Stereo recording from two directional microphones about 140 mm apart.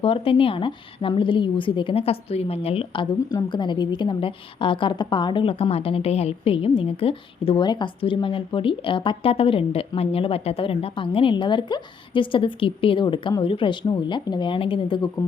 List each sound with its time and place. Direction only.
0.0 s a woman's voice: 40° left (ahead or behind)